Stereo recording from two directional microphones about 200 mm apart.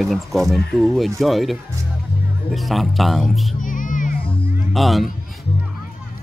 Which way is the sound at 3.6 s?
40° left (ahead or behind).